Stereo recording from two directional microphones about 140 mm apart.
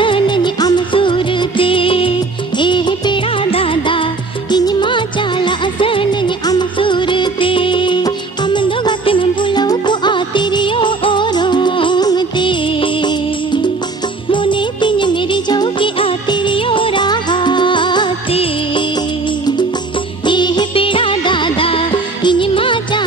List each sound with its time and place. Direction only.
0.0 s music: 35° left (ahead or behind)
20.2 s music: 35° left (ahead or behind)